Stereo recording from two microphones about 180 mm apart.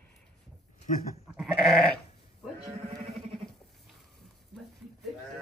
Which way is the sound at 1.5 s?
5° left (ahead or behind).